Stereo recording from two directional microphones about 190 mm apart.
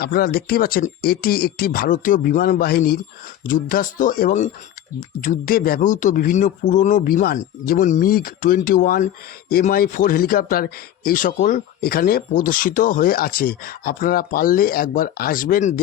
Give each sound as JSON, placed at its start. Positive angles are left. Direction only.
{"t": 0.0, "sound": "speech", "side_deg": 55}